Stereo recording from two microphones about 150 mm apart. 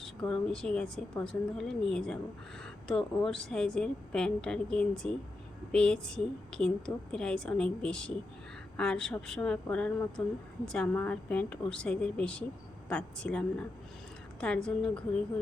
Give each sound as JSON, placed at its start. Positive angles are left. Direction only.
{"t": 0.0, "sound": "a woman's voice", "side_deg": 5}